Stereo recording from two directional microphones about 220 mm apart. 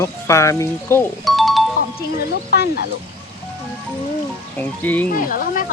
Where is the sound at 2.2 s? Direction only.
50° left (ahead or behind).